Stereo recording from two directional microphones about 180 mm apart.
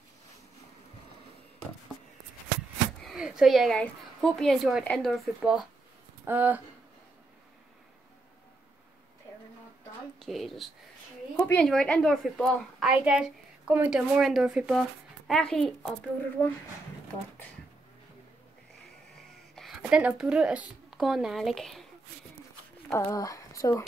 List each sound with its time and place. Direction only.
3.0 s a woman's voice: centre (ahead or behind)
10.1 s a woman's voice: centre (ahead or behind)
11.3 s a woman's voice: 15° left (ahead or behind)
19.5 s a woman's voice: centre (ahead or behind)
22.9 s speech: 20° left (ahead or behind)